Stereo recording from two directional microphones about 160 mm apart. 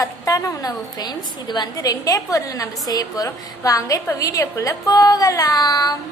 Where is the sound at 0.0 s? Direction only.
20° left (ahead or behind).